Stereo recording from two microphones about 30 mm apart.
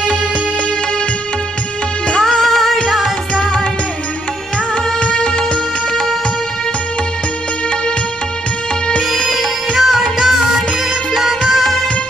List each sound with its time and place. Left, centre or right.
2.1 s music: centre
2.4 s music: centre
5.0 s music: left
9.8 s music of bollywood: centre
10.1 s music: centre